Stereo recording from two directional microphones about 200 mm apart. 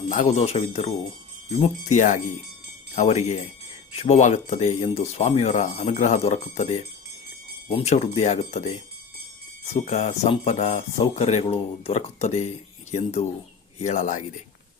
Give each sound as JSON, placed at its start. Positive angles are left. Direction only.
{"t": 0.1, "sound": "speech", "side_deg": 35}